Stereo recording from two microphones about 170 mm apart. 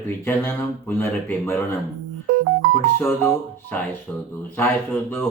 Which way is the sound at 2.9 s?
15° left (ahead or behind).